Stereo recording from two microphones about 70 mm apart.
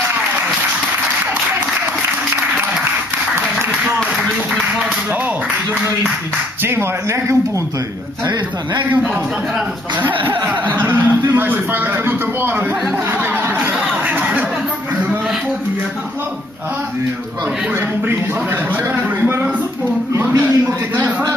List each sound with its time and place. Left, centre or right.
6.6 s speech: right
10.0 s speech: right
13.2 s a sound: right
20.3 s speech: right